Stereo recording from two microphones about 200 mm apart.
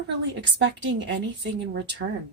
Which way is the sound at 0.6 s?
65° right (ahead or behind).